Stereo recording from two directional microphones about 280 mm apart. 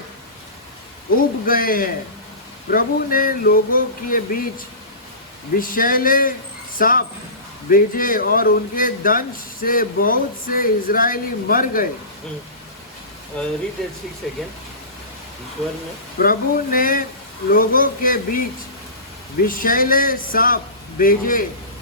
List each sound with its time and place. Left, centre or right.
1.5 s speech: left
13.4 s speech: centre
16.1 s speech: left
19.5 s speech: left